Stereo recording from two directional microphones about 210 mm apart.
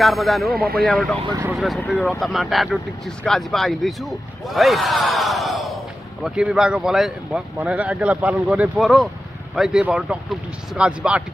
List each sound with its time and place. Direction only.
0.0 s speech: centre (ahead or behind)
0.6 s speech: 45° right (ahead or behind)
0.8 s speech: centre (ahead or behind)